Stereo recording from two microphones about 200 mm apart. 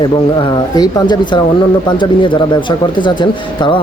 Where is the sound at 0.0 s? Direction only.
25° left (ahead or behind).